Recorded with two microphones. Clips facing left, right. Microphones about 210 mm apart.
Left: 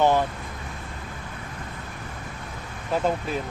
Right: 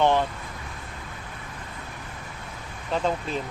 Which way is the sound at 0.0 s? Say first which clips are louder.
Left 1 dB; 10° left (ahead or behind).